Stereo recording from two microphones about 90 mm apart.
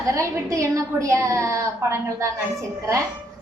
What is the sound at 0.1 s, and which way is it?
A woman's voice, 35° right (ahead or behind).